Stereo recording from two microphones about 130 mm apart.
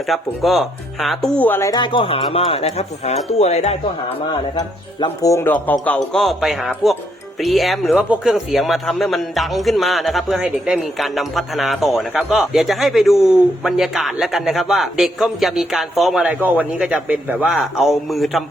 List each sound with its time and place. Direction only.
0.1 s a man's voice: centre (ahead or behind)
1.4 s a man's voice: 15° left (ahead or behind)
1.7 s speech: 35° left (ahead or behind); by 3.8 s 55° left (ahead or behind)
4.3 s a man's voice: 35° left (ahead or behind); by 6.2 s 10° left (ahead or behind)
6.2 s a man's voice: centre (ahead or behind)